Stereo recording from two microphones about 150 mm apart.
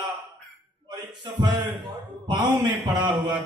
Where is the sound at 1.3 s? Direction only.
30° right (ahead or behind).